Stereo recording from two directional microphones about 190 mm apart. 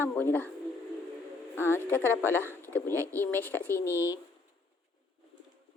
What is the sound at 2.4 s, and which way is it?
Speech, 10° right (ahead or behind).